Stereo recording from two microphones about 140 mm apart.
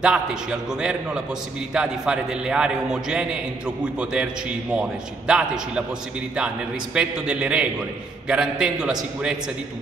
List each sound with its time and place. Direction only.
0.0 s a man's voice: 5° right (ahead or behind)